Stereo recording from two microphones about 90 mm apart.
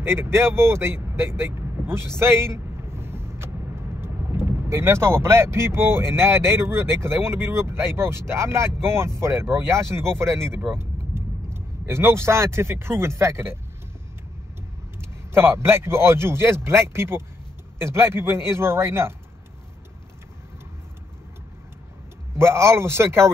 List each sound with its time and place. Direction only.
0.0 s speech: 25° right (ahead or behind)
15.0 s speech: 30° right (ahead or behind)
22.4 s speech: 30° right (ahead or behind)